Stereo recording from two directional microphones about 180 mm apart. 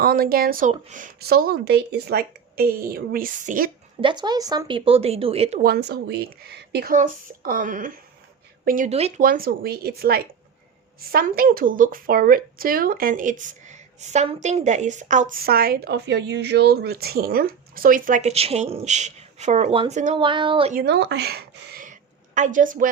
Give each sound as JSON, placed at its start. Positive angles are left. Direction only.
{"t": 0.0, "sound": "speech", "side_deg": -55}
{"t": 0.7, "sound": "speech", "side_deg": -45}
{"t": 4.0, "sound": "speech", "side_deg": -25}
{"t": 5.6, "sound": "speech", "side_deg": -60}
{"t": 6.9, "sound": "speech", "side_deg": -50}
{"t": 9.2, "sound": "speech", "side_deg": -50}
{"t": 20.7, "sound": "speech", "side_deg": -70}
{"t": 22.4, "sound": "speech", "side_deg": -45}